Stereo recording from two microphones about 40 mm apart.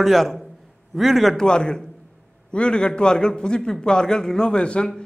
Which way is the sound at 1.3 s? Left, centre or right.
Left.